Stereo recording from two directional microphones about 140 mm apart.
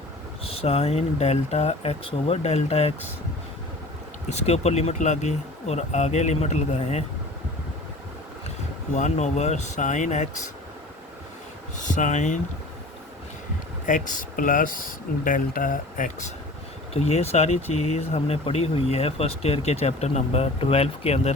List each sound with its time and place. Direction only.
0.4 s speech: 45° left (ahead or behind)
4.3 s speech: 50° left (ahead or behind)
9.0 s speech: 55° left (ahead or behind)
11.8 s speech: 60° left (ahead or behind)
13.8 s speech: 70° left (ahead or behind)
16.9 s speech: 50° left (ahead or behind)